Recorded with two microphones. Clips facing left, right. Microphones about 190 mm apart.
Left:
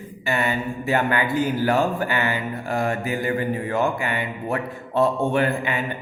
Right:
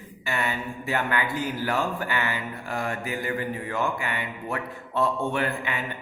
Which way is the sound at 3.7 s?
20° left (ahead or behind).